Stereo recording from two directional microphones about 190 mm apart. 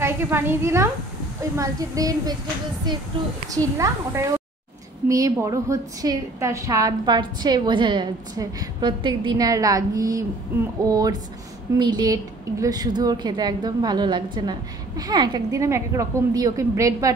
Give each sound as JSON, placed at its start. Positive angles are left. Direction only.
{"t": 0.0, "sound": "a woman's voice", "side_deg": -10}
{"t": 3.4, "sound": "a woman's voice", "side_deg": -15}